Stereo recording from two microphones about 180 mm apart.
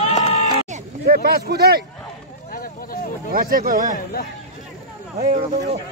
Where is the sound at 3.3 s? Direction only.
55° right (ahead or behind).